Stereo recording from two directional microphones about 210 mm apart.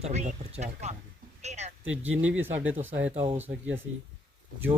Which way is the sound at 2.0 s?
65° right (ahead or behind).